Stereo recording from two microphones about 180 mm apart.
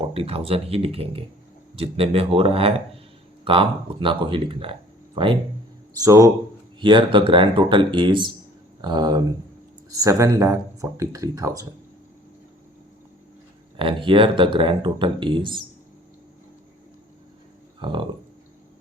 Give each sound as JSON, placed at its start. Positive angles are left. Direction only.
{"t": 0.0, "sound": "speech", "side_deg": -30}
{"t": 6.0, "sound": "speech", "side_deg": -20}
{"t": 13.7, "sound": "speech", "side_deg": -30}
{"t": 17.7, "sound": "speech", "side_deg": -25}